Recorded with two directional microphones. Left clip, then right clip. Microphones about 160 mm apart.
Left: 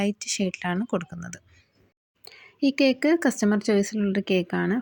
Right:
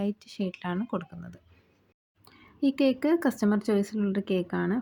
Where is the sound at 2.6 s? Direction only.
10° left (ahead or behind).